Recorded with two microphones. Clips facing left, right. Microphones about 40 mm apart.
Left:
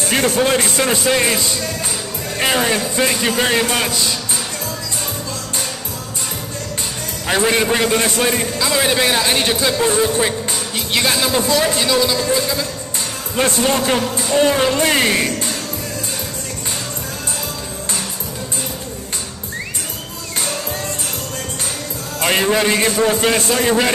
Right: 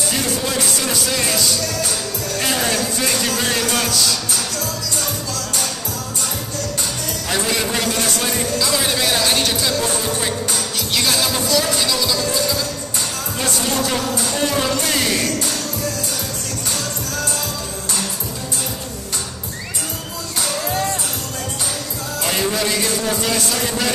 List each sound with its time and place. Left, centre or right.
0.1 s a man's voice: left
7.2 s a man's voice: left
22.2 s speech: left